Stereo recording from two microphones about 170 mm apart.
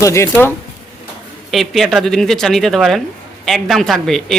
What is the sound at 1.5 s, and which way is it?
Speech, centre (ahead or behind).